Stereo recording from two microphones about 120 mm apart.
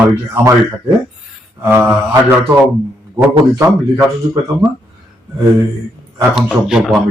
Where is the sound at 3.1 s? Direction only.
25° right (ahead or behind).